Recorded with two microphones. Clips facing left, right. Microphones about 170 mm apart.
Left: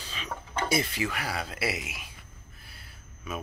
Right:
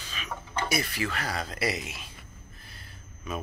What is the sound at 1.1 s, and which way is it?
Speech, 10° left (ahead or behind).